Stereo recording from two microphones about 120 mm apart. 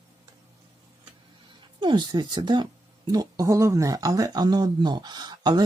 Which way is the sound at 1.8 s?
40° right (ahead or behind).